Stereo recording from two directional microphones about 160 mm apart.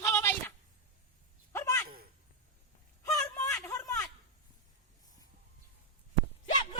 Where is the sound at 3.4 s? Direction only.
20° left (ahead or behind).